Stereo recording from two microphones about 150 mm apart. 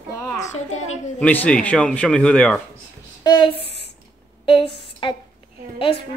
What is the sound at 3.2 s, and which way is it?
Speech, 30° left (ahead or behind).